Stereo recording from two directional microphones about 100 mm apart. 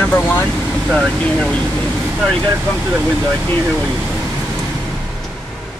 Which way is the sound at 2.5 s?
25° right (ahead or behind).